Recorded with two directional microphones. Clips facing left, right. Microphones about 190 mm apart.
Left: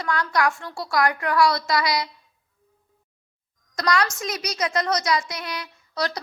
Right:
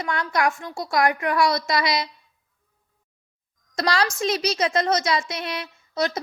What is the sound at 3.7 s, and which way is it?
A woman's voice, 30° right (ahead or behind).